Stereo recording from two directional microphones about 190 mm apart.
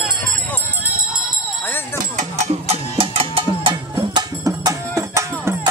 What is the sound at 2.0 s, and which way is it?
Music, 35° right (ahead or behind).